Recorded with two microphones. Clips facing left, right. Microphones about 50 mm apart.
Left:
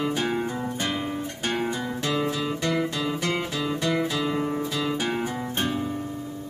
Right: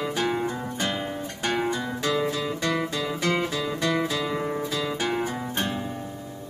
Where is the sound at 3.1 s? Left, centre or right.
Right.